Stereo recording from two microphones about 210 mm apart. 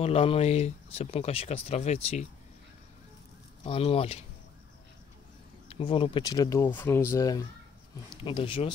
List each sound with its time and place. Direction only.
0.0 s speech: 25° left (ahead or behind)
3.6 s speech: 25° left (ahead or behind)
5.7 s speech: 25° left (ahead or behind)